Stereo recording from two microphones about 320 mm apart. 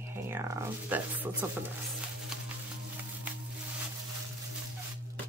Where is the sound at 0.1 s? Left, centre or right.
Centre.